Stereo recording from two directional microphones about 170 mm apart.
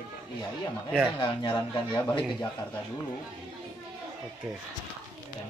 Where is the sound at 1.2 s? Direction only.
25° left (ahead or behind).